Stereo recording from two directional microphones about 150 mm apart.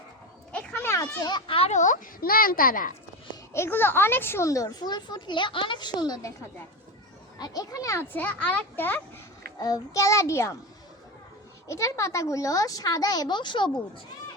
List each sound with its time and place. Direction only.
0.5 s a child's voice: 10° left (ahead or behind); by 2.9 s 70° left (ahead or behind)
3.5 s speech: 15° left (ahead or behind)
7.3 s speech: 25° left (ahead or behind)
9.6 s speech: 25° left (ahead or behind)
11.7 s speech: 20° left (ahead or behind)